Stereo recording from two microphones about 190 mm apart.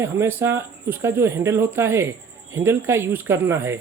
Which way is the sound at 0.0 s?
10° right (ahead or behind).